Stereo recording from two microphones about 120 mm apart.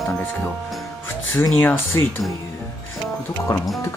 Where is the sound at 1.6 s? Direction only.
20° left (ahead or behind).